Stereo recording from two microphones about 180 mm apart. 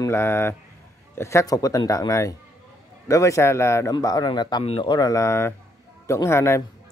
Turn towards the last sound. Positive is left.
turn(degrees=15)  # may be behind; listen again after turning